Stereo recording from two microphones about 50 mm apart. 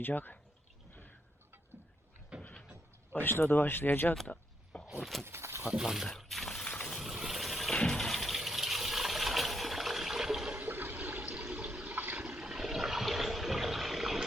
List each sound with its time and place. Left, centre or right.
0.0 s speech: left
2.3 s vehicle: right
3.1 s speech: left
4.3 s speech: left
4.7 s a sound: left
5.2 s speech: right
5.8 s speech: centre
6.1 s a sound: centre
7.0 s a sound: centre
7.8 s water: centre
10.6 s toilet flush: right
10.9 s toilet flush: right
11.9 s toilet flush: right
12.2 s toilet flush: centre